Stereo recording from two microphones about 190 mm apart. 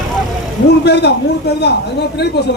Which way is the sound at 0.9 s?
60° left (ahead or behind).